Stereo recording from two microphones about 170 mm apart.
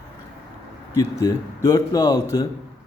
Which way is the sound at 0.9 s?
20° left (ahead or behind).